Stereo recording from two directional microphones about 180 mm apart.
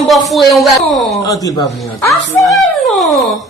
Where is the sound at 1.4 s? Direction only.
20° left (ahead or behind).